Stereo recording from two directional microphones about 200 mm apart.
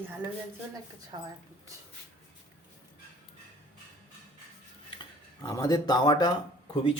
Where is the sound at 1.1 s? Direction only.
25° right (ahead or behind).